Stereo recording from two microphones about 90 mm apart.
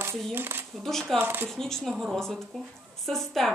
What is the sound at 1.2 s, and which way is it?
Speech, 25° right (ahead or behind).